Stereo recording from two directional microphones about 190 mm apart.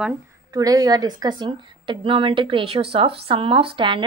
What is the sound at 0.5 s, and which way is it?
A woman's voice, 20° right (ahead or behind).